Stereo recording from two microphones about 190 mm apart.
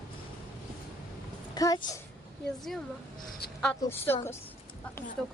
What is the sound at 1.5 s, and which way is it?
Speech, 20° left (ahead or behind).